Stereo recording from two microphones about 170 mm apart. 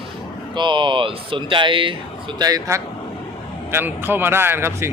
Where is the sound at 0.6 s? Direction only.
30° right (ahead or behind).